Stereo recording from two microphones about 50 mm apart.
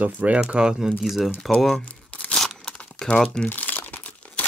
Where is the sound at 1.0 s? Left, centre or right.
Centre.